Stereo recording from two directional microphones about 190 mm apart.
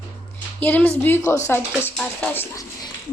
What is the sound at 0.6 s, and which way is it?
A child's voice, 10° left (ahead or behind).